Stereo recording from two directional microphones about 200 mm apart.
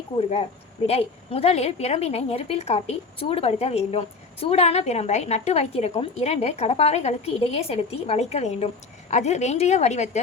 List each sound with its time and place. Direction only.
0.2 s a woman's voice: 30° left (ahead or behind)